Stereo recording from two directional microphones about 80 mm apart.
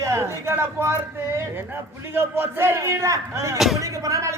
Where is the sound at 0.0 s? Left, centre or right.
Right.